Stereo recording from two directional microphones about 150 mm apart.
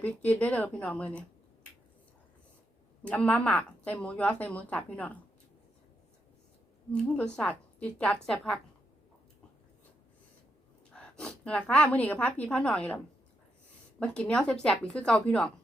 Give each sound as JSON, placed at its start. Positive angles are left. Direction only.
{"t": 0.0, "sound": "a woman's voice", "side_deg": 10}
{"t": 3.0, "sound": "a woman's voice", "side_deg": 10}
{"t": 6.9, "sound": "a woman's voice", "side_deg": 5}
{"t": 10.9, "sound": "a woman's voice", "side_deg": 5}
{"t": 14.0, "sound": "a woman's voice", "side_deg": 5}